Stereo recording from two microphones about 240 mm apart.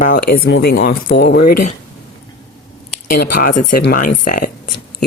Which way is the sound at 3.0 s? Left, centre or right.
Left.